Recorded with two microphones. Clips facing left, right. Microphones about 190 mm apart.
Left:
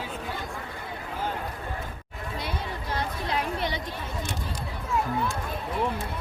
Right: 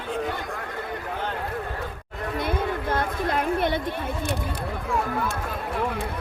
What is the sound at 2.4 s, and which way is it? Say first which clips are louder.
Chatter: right 8 dB; 50° right (ahead or behind).